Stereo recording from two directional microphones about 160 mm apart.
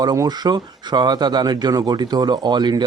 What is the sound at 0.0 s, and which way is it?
Speech, 25° right (ahead or behind).